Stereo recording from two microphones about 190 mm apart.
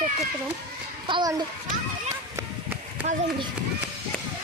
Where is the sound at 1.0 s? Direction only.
25° right (ahead or behind).